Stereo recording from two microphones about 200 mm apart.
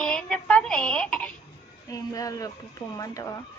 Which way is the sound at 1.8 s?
20° left (ahead or behind).